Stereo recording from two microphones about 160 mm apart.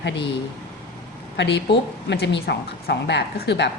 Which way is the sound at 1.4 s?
90° left.